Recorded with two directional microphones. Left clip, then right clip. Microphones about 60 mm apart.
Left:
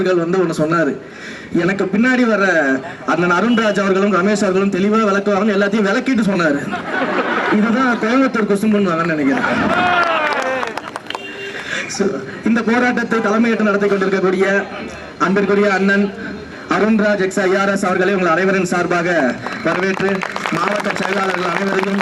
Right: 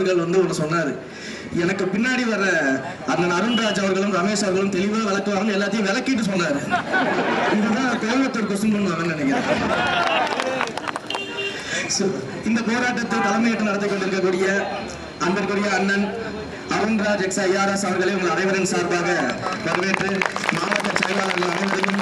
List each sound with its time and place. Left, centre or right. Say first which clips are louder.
0.0 s a man's voice: left 4 dB; left
7.5 s a man's voice: left 6 dB; left
12.5 s a man's voice: left 7 dB; left